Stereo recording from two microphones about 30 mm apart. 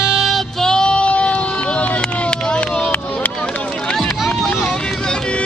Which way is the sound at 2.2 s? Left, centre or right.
Left.